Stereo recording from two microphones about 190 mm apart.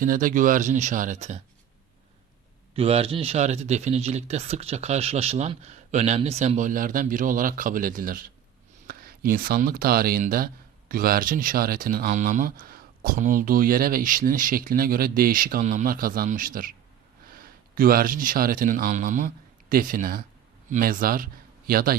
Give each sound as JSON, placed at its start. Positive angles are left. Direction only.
{"t": 0.0, "sound": "speech", "side_deg": -45}
{"t": 2.7, "sound": "speech", "side_deg": -30}